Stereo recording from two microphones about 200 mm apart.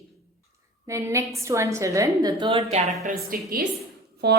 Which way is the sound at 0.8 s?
15° right (ahead or behind).